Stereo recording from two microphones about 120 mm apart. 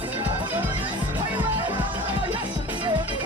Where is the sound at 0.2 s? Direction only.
15° right (ahead or behind).